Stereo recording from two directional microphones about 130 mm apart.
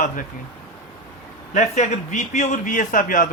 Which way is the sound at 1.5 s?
65° left (ahead or behind).